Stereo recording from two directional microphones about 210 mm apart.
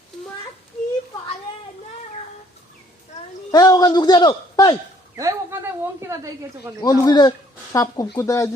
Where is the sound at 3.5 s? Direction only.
20° left (ahead or behind).